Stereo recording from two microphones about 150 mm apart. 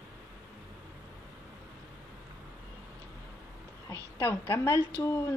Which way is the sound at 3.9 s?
20° left (ahead or behind).